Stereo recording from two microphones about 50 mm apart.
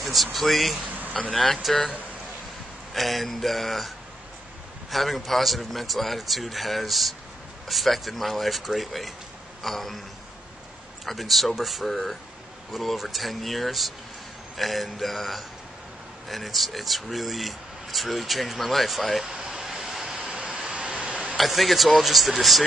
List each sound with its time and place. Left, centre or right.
0.0 s a man's voice: centre
2.9 s a man's voice: centre
9.6 s a sound: centre
11.1 s a man's voice: centre
20.2 s hiccup: centre
21.4 s a man's voice: centre